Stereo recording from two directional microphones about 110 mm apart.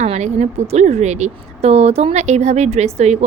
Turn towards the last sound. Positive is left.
turn(degrees=-85)